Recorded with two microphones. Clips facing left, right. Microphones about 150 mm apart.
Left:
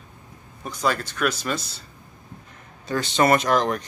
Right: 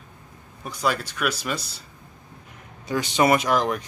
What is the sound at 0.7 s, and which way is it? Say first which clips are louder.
Speech: left 1 dB; 5° right (ahead or behind).